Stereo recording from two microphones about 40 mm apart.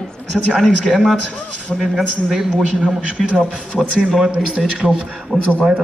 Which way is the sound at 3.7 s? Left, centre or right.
Centre.